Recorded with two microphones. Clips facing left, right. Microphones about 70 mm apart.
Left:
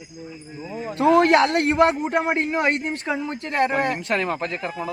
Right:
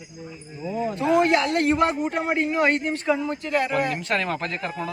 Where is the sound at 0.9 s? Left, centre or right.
Left.